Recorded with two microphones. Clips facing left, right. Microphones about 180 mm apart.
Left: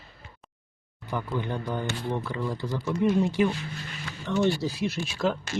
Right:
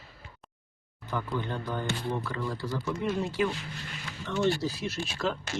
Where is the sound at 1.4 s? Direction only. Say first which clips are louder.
Left 3 dB; 15° left (ahead or behind).